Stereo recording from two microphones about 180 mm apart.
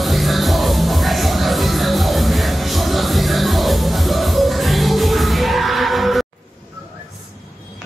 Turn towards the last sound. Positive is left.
turn(degrees=0)  # may be behind; listen again after turning